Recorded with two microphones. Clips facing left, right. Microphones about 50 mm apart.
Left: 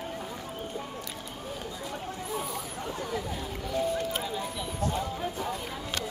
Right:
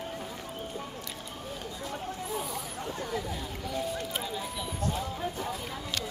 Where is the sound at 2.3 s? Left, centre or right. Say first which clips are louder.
Left 1 dB; centre.